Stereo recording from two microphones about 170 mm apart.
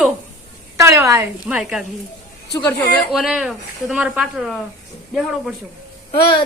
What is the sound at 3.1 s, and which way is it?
Speech, centre (ahead or behind).